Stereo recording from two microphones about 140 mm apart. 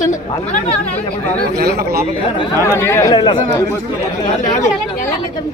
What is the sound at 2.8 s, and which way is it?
Speech, 20° left (ahead or behind).